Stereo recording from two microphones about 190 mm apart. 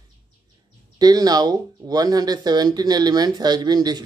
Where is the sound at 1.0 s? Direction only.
20° right (ahead or behind).